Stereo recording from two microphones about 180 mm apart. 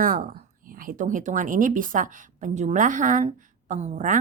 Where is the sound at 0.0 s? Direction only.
50° right (ahead or behind).